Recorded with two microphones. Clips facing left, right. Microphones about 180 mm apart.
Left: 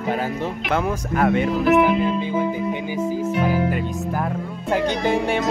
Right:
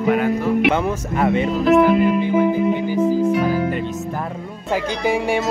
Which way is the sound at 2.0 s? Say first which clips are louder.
Right 5 dB; 15° right (ahead or behind).